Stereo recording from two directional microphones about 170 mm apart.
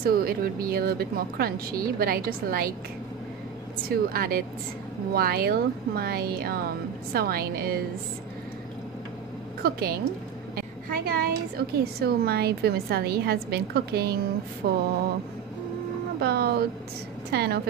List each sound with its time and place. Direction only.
0.0 s speech: 60° right (ahead or behind)
3.9 s speech: 60° right (ahead or behind)
9.6 s a woman's voice: 65° right (ahead or behind)
16.2 s a woman's voice: 70° right (ahead or behind)